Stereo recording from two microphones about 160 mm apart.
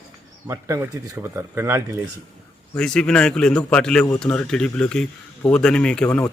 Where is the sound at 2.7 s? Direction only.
5° left (ahead or behind).